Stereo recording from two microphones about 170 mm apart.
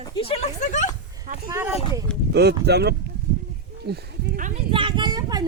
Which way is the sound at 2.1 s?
5° left (ahead or behind).